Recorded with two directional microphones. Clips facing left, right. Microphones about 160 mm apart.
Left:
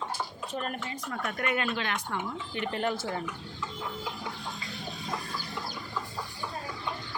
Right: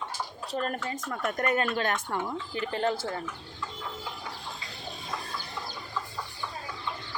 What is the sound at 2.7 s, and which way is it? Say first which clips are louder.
Speech: right 3 dB; 30° right (ahead or behind).